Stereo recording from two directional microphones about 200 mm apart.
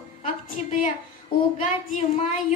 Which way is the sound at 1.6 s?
40° left (ahead or behind).